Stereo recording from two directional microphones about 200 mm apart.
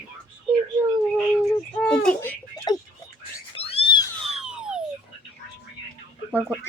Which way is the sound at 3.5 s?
30° left (ahead or behind).